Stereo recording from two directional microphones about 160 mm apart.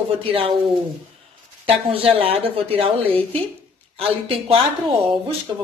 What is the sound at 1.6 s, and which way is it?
Speech, 35° right (ahead or behind).